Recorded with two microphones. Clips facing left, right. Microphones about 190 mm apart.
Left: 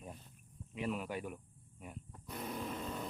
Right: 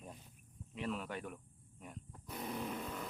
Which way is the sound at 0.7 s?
10° left (ahead or behind).